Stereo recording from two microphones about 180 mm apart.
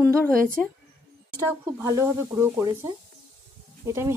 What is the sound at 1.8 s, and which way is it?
A woman's voice, 15° right (ahead or behind).